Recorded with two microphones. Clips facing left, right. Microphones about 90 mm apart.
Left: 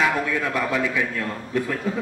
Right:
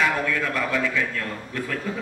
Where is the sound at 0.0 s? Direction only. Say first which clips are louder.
Left 1 dB; 15° left (ahead or behind).